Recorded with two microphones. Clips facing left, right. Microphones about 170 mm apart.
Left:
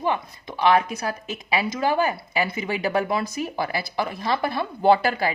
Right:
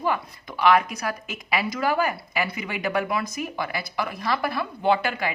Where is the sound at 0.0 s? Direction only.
25° left (ahead or behind).